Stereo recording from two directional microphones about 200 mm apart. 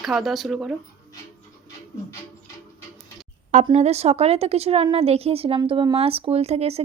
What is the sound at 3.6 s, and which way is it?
A woman's voice, 30° right (ahead or behind).